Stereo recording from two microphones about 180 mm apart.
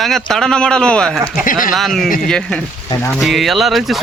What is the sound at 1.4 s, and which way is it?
Speech, 50° left (ahead or behind).